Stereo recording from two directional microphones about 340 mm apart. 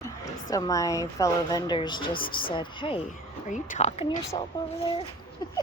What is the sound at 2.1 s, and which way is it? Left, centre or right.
Speech, left.